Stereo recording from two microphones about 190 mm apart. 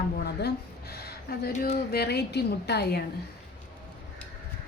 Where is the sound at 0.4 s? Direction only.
55° left (ahead or behind).